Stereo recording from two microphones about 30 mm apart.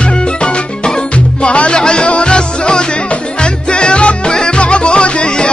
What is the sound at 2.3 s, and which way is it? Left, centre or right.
Music, left.